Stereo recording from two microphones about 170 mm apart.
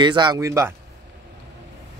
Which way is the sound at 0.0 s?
25° right (ahead or behind).